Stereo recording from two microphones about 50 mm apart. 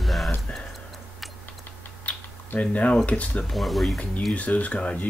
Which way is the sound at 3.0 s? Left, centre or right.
Left.